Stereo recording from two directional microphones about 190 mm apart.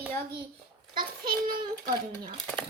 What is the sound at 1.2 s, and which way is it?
A child's voice, 50° right (ahead or behind).